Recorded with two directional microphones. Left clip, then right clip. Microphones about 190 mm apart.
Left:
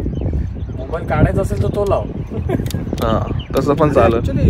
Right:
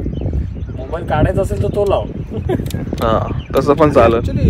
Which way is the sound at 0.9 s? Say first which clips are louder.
Right 2 dB; 25° right (ahead or behind).